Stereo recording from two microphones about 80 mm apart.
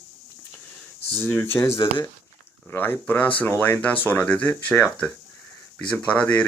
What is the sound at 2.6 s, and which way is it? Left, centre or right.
Speech, left.